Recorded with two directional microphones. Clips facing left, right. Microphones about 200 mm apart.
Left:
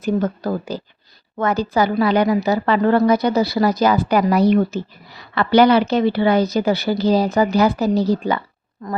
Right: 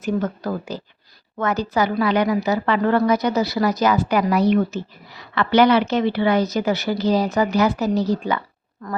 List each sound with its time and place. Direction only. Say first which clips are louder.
0.0 s speech: left 3 dB; 35° left (ahead or behind)